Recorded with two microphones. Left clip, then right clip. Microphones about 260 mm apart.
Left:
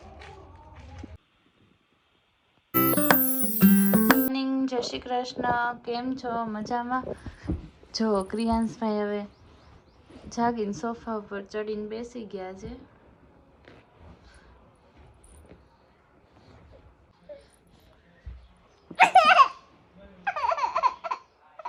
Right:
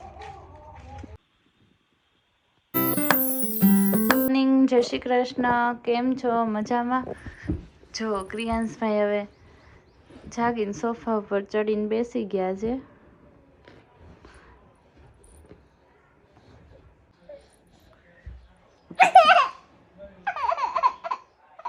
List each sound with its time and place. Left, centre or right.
0.0 s a sound: centre
2.7 s music: centre
4.6 s speech: left
4.9 s a woman's voice: centre
14.3 s a sound: centre
17.3 s a sound: centre
18.9 s babbling: centre
20.2 s baby laughter: centre
21.6 s honk: centre